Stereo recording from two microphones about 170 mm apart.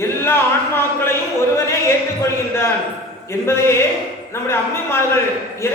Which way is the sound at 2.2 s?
15° left (ahead or behind).